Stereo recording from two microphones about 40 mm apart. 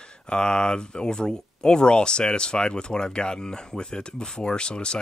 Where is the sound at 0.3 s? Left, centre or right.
Left.